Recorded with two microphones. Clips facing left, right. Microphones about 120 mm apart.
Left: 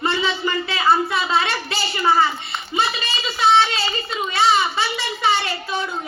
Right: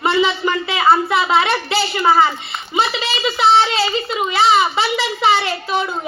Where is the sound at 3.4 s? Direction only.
20° right (ahead or behind).